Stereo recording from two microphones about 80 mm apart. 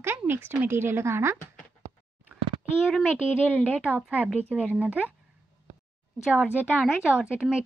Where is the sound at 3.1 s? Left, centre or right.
Centre.